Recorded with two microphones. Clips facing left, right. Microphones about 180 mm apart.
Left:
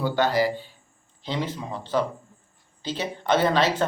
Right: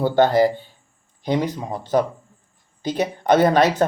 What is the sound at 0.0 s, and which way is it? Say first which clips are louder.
Speech: right 6 dB; 50° right (ahead or behind).